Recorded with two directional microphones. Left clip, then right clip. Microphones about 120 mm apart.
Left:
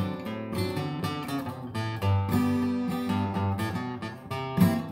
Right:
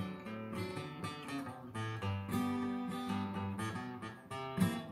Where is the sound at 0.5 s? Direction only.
30° left (ahead or behind).